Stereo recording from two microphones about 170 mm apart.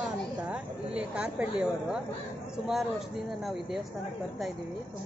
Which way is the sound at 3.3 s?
Centre (ahead or behind).